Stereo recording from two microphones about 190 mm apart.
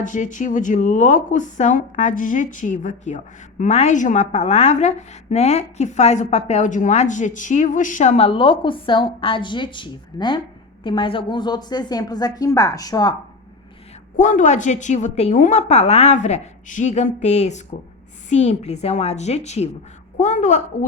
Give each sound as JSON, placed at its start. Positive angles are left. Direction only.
{"t": 0.0, "sound": "a woman's voice", "side_deg": 40}
{"t": 14.2, "sound": "a woman's voice", "side_deg": 40}